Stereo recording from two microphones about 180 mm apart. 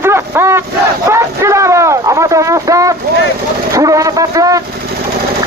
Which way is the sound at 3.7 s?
20° right (ahead or behind).